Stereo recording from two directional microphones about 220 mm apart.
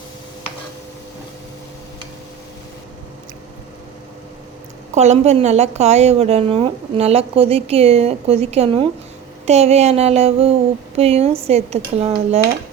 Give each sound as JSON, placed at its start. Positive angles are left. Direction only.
{"t": 4.9, "sound": "a woman's voice", "side_deg": -30}